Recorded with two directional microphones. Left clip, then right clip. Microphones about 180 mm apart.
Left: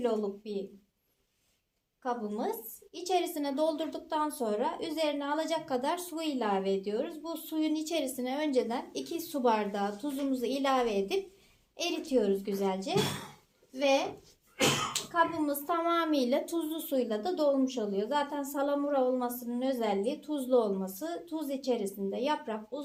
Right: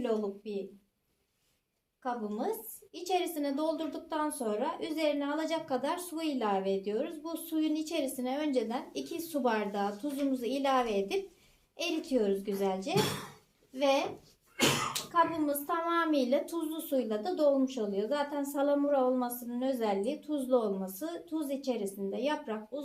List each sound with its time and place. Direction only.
0.0 s a woman's voice: 35° left (ahead or behind)
2.0 s a woman's voice: 35° left (ahead or behind)
15.1 s a woman's voice: 40° left (ahead or behind)